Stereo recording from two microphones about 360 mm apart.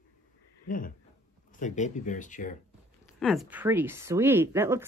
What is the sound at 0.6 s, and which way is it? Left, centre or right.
Speech, left.